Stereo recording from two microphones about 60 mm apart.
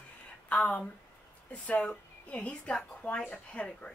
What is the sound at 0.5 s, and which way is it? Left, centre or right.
Speech, left.